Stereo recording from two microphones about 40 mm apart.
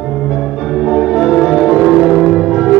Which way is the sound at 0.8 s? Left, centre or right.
Centre.